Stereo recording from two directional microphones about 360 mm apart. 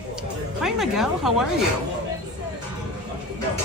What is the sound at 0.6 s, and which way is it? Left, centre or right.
Speech, centre.